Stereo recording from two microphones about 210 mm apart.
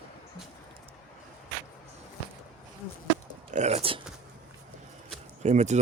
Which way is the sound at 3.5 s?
35° right (ahead or behind).